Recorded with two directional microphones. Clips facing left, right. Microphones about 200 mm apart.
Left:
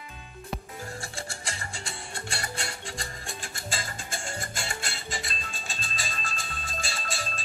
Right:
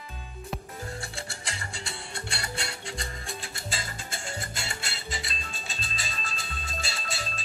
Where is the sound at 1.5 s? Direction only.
45° left (ahead or behind).